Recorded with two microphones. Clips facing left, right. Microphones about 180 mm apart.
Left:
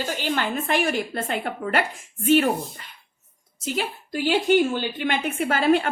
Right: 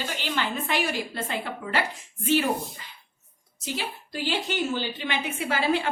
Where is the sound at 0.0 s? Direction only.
45° left (ahead or behind).